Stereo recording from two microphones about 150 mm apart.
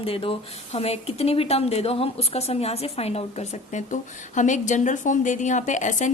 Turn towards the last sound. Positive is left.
turn(degrees=55)  # may be behind; listen again after turning